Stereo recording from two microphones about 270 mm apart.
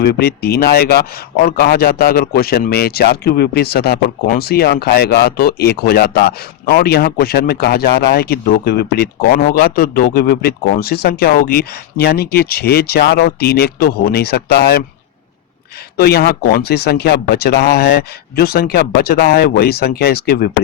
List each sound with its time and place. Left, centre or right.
0.0 s speech: left
16.0 s speech: left